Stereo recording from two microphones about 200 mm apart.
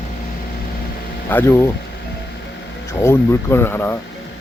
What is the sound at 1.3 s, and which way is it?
Speech, 10° left (ahead or behind).